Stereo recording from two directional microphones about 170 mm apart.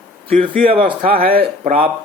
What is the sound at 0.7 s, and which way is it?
Speech, 30° right (ahead or behind).